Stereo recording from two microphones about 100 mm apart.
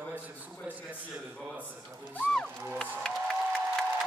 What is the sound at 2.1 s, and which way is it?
Speech, 10° left (ahead or behind).